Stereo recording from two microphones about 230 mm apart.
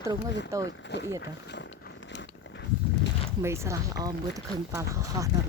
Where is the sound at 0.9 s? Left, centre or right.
Left.